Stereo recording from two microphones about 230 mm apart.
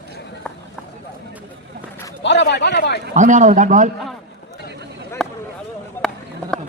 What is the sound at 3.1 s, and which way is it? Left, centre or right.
Speech, right.